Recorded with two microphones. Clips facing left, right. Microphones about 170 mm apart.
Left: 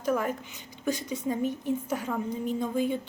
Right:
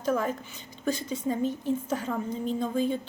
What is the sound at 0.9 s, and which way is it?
A woman's voice, 15° left (ahead or behind).